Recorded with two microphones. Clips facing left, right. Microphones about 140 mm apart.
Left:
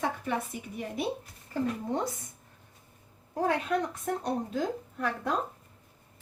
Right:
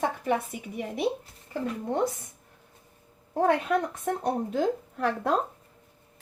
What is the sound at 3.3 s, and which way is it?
A woman's voice, 55° right (ahead or behind).